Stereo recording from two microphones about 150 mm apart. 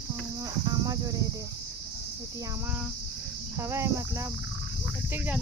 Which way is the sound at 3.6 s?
20° right (ahead or behind).